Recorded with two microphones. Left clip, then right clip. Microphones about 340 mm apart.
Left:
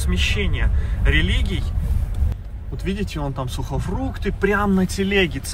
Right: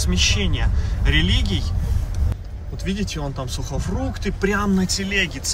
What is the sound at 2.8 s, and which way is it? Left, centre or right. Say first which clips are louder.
Speech: even; centre.